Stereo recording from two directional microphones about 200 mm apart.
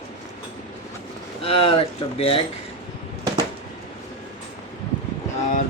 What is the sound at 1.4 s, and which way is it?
Speech, 30° left (ahead or behind).